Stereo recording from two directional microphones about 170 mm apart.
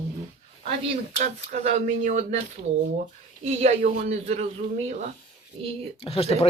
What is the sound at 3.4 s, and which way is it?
Speech, 40° right (ahead or behind).